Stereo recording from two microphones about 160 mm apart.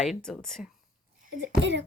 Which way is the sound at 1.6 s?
90° right.